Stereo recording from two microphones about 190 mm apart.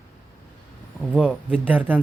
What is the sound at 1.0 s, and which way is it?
Speech, centre (ahead or behind).